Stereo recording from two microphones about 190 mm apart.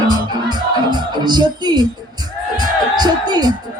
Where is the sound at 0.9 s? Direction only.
20° right (ahead or behind).